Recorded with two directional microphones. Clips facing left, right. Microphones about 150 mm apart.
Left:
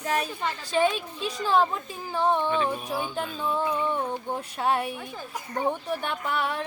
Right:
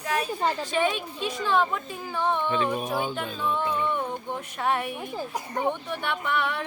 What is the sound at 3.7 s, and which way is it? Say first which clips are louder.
Speech: even; 35° left (ahead or behind).